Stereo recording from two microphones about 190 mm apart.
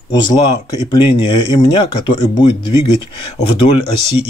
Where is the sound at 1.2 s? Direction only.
25° left (ahead or behind).